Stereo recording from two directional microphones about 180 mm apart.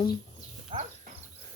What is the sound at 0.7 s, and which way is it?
Speech, 30° right (ahead or behind).